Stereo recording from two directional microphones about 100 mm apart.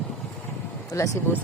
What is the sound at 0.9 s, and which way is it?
Speech, 30° left (ahead or behind).